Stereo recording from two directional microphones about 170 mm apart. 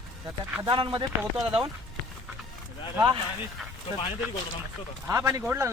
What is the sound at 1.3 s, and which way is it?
Speech, 5° right (ahead or behind).